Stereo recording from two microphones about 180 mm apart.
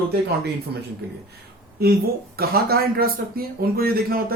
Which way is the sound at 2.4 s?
55° right (ahead or behind).